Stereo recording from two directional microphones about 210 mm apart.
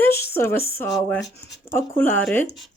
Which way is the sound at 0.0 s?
10° left (ahead or behind).